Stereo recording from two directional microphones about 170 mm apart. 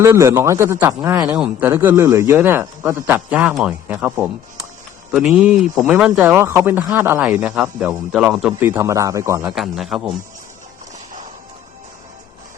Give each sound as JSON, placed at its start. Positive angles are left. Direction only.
{"t": 0.0, "sound": "speech", "side_deg": -15}
{"t": 8.7, "sound": "speech", "side_deg": -15}
{"t": 9.6, "sound": "a man's voice", "side_deg": 0}